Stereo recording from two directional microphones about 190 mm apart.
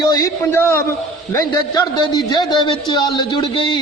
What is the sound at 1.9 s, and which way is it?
A man's voice, 20° left (ahead or behind).